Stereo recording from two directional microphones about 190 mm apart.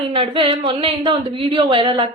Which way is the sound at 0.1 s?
25° right (ahead or behind).